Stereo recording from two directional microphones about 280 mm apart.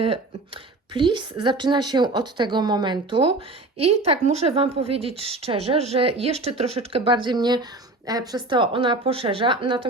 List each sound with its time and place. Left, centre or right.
0.0 s a woman's voice: centre